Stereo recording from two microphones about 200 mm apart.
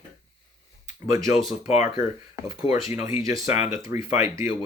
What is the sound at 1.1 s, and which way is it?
Speech, 15° right (ahead or behind).